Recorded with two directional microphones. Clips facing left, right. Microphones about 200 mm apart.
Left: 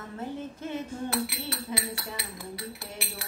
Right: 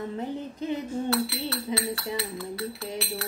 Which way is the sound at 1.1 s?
15° left (ahead or behind).